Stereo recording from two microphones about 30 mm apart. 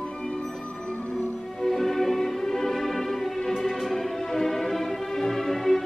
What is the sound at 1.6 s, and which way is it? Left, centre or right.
Music, centre.